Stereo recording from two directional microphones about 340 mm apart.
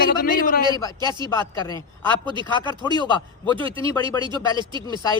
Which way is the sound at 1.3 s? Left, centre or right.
Centre.